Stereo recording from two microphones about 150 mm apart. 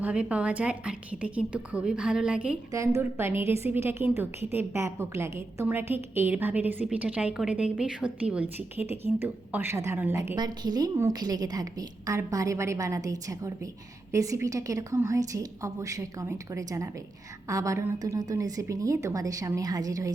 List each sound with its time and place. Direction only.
0.0 s a woman's voice: 10° right (ahead or behind)
2.7 s a woman's voice: 20° right (ahead or behind)
10.3 s a woman's voice: 25° right (ahead or behind)